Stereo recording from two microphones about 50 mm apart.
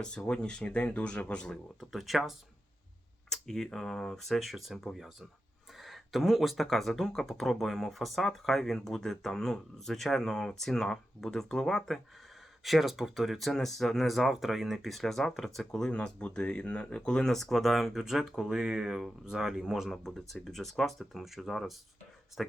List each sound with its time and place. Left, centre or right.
0.3 s speech: centre
1.8 s speech: centre
3.2 s speech: centre
5.8 s speech: centre
15.9 s speech: left
17.3 s speech: centre
19.9 s speech: centre